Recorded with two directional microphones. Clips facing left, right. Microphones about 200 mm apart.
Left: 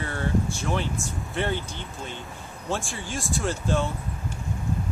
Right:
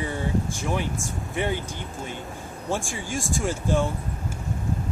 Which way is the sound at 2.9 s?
15° right (ahead or behind).